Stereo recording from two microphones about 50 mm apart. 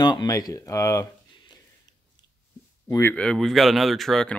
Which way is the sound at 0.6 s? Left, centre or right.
Left.